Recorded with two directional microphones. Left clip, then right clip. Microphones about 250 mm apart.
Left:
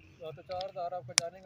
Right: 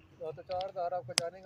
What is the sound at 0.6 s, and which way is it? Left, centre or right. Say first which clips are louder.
Speech: right 2 dB; left.